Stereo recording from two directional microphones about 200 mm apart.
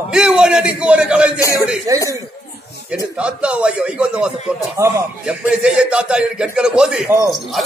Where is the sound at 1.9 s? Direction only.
20° right (ahead or behind).